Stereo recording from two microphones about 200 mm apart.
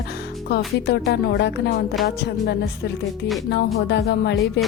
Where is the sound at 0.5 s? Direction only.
55° left (ahead or behind).